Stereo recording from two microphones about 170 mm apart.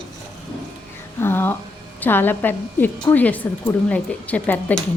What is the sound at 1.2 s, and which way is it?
A woman's voice, 15° left (ahead or behind).